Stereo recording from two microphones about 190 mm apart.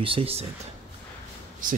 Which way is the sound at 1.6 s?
45° right (ahead or behind).